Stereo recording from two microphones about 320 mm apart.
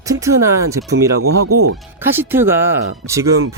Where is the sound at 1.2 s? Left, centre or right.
Right.